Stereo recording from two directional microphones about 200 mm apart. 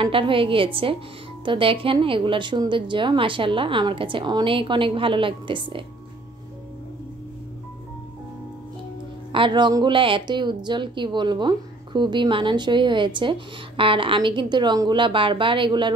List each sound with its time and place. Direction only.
0.0 s a woman's voice: 25° right (ahead or behind)
9.3 s a woman's voice: 25° right (ahead or behind)